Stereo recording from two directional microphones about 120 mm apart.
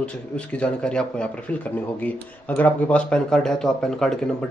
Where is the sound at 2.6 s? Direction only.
10° left (ahead or behind).